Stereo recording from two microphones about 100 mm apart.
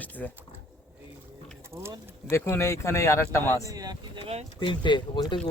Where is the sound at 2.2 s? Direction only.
30° left (ahead or behind).